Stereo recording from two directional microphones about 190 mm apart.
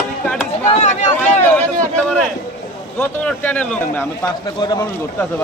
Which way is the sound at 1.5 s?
5° left (ahead or behind).